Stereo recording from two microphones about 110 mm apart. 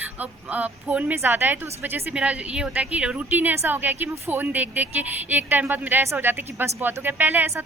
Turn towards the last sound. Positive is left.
turn(degrees=-20)  # may be behind; listen again after turning